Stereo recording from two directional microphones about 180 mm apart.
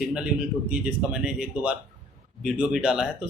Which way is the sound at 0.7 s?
5° right (ahead or behind).